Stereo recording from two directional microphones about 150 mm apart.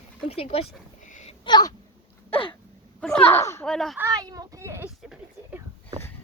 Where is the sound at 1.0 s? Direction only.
60° left (ahead or behind).